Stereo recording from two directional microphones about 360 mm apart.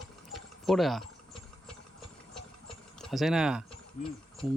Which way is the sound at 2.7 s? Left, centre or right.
Centre.